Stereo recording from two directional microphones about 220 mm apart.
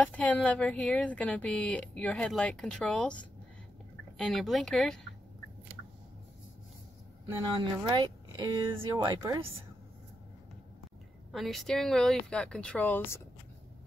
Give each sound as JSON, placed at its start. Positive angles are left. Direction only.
{"t": 0.0, "sound": "speech", "side_deg": 5}
{"t": 7.5, "sound": "speech", "side_deg": -20}
{"t": 11.3, "sound": "speech", "side_deg": 0}